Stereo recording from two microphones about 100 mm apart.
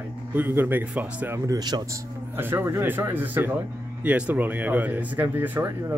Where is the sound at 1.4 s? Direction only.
40° right (ahead or behind).